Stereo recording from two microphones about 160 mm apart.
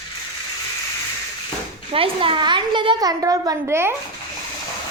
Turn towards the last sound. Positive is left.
turn(degrees=-15)  # may be behind; listen again after turning